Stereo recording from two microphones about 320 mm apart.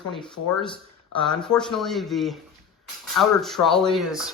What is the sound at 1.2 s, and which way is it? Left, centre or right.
Speech, centre.